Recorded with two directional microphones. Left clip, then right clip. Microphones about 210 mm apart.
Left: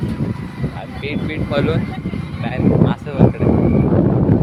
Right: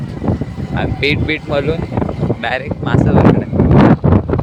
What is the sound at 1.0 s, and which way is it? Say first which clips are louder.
Speech: right 8 dB; 35° right (ahead or behind).